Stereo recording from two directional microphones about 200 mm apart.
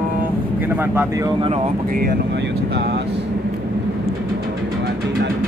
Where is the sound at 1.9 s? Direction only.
45° right (ahead or behind).